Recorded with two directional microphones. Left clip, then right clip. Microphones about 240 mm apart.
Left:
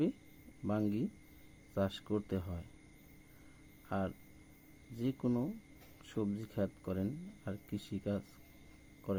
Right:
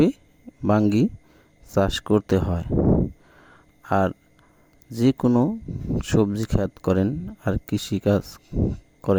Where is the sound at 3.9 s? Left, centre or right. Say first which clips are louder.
Right 18 dB; right.